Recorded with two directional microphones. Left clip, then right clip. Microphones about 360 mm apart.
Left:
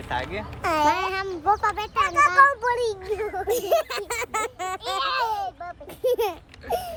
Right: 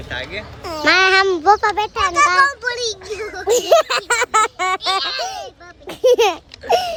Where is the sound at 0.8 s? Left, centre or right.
Right.